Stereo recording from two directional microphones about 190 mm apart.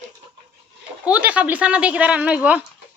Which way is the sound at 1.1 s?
5° right (ahead or behind).